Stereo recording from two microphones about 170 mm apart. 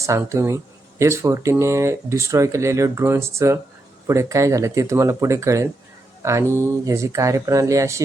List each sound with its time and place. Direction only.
0.0 s speech: 15° right (ahead or behind)